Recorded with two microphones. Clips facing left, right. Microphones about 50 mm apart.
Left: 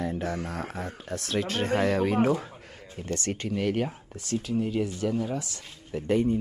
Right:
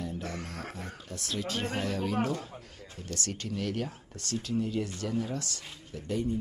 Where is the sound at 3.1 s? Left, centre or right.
Left.